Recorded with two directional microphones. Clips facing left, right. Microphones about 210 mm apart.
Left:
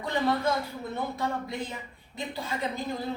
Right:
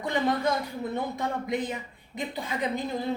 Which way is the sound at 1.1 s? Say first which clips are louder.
Right 3 dB; 20° right (ahead or behind).